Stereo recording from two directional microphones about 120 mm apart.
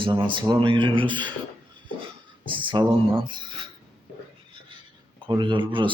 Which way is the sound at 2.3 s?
45° right (ahead or behind).